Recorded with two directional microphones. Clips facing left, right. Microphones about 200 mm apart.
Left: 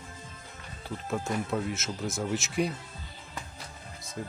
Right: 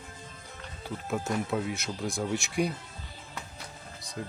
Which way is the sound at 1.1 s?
Centre (ahead or behind).